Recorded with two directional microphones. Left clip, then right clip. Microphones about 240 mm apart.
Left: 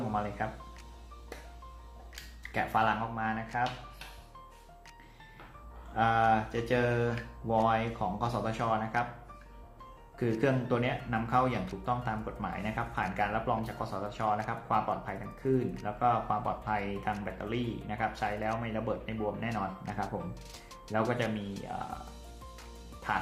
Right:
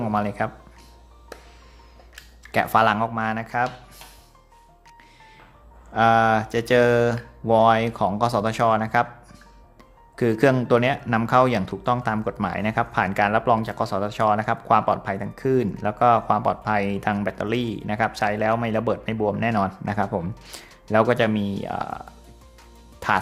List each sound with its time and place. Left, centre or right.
0.1 s speech: right
2.5 s speech: right
5.9 s speech: right
10.2 s speech: right
20.9 s speech: centre
23.0 s music: right